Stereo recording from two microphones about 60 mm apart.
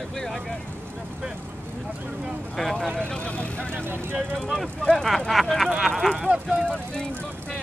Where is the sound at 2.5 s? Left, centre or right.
Centre.